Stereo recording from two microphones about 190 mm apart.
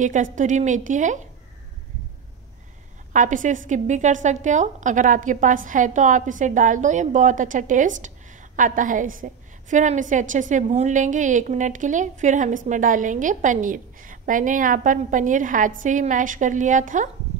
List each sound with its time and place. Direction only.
0.0 s a woman's voice: 40° right (ahead or behind)
3.1 s a woman's voice: 40° right (ahead or behind)